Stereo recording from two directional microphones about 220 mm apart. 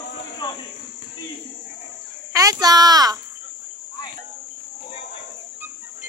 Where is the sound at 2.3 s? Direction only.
15° right (ahead or behind).